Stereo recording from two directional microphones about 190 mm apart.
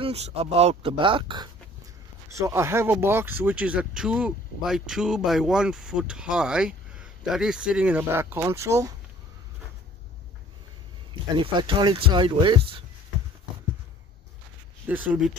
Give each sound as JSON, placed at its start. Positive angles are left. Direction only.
{"t": 0.0, "sound": "speech", "side_deg": -30}
{"t": 2.3, "sound": "speech", "side_deg": -15}
{"t": 11.3, "sound": "speech", "side_deg": -25}
{"t": 14.9, "sound": "speech", "side_deg": -10}